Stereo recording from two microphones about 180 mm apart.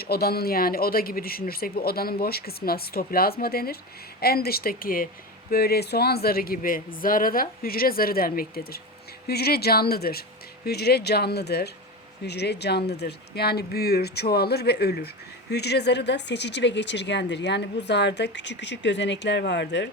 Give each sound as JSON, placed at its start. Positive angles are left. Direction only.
{"t": 0.0, "sound": "a man's voice", "side_deg": 60}